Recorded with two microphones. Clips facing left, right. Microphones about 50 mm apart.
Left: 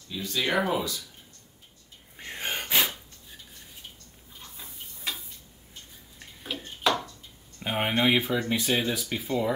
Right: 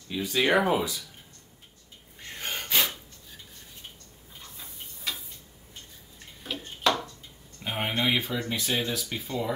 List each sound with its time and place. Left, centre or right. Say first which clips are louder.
0.1 s speech: right 4 dB; right
2.1 s gasp: left 2 dB; centre
6.4 s a sound: right 1 dB; centre
7.6 s speech: left 3 dB; centre